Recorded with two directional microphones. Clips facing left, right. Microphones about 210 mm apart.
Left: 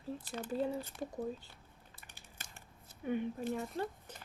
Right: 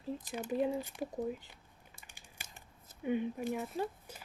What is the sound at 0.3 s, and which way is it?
Speech, 15° right (ahead or behind).